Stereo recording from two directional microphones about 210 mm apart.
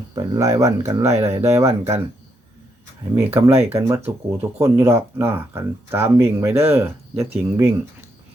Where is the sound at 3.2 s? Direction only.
10° right (ahead or behind).